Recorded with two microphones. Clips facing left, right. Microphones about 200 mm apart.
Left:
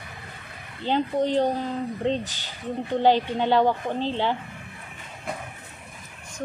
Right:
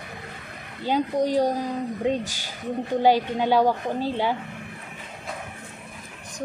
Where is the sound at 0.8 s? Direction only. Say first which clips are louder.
Even; 10° right (ahead or behind).